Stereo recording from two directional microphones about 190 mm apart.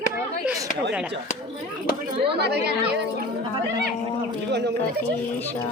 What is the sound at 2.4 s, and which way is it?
Speech, 60° right (ahead or behind).